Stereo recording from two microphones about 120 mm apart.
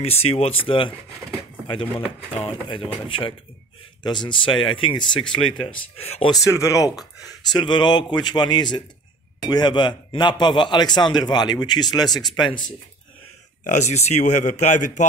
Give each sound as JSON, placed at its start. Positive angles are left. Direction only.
{"t": 0.0, "sound": "speech", "side_deg": 55}
{"t": 5.9, "sound": "speech", "side_deg": 55}
{"t": 6.4, "sound": "speech", "side_deg": 25}
{"t": 7.5, "sound": "a man's voice", "side_deg": 40}
{"t": 13.7, "sound": "speech", "side_deg": 75}